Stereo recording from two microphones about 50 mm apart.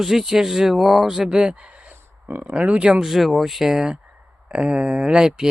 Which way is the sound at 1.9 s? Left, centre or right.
Right.